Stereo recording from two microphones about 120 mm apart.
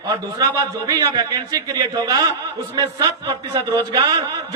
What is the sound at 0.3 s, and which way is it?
A man's voice, 30° right (ahead or behind).